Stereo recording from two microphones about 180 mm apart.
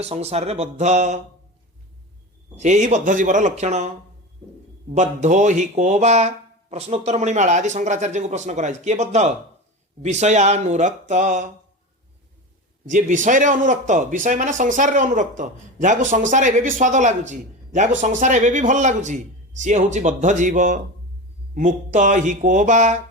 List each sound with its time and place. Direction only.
0.0 s speech: 35° right (ahead or behind)
2.6 s speech: 40° right (ahead or behind)
12.9 s speech: 45° right (ahead or behind)